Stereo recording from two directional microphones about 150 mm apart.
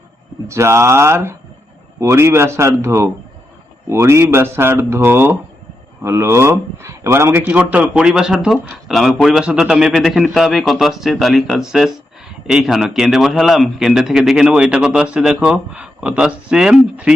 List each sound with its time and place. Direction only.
0.4 s a man's voice: 20° right (ahead or behind)